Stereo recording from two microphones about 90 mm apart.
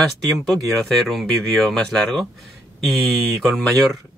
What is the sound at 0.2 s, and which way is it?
Speech, centre (ahead or behind).